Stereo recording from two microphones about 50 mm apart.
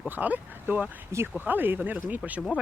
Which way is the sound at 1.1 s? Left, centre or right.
Right.